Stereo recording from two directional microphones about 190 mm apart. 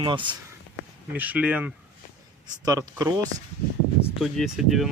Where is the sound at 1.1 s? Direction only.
10° right (ahead or behind).